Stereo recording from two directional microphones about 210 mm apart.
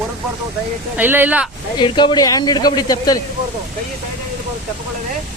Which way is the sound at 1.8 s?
20° left (ahead or behind).